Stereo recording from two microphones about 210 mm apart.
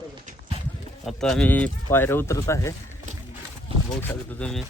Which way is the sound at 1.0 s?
5° left (ahead or behind).